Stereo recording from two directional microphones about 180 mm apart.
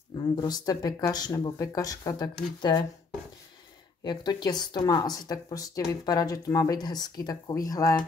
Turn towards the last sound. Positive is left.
turn(degrees=20)  # may be behind; listen again after turning